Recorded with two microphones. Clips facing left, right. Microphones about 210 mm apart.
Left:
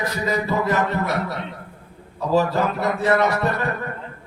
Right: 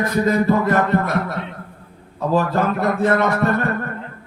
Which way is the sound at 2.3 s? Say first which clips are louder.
Right 1 dB; 50° right (ahead or behind).